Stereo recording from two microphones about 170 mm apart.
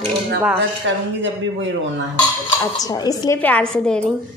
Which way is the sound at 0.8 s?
90° right.